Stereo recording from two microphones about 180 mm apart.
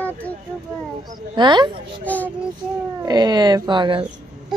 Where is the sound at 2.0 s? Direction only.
10° left (ahead or behind).